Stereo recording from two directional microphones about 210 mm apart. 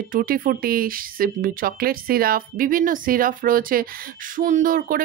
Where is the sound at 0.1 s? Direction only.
40° right (ahead or behind).